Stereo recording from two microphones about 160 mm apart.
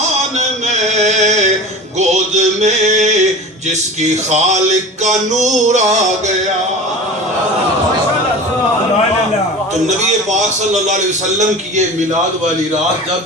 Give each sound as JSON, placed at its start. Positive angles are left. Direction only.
{"t": 0.3, "sound": "music", "side_deg": -45}
{"t": 10.8, "sound": "music", "side_deg": -50}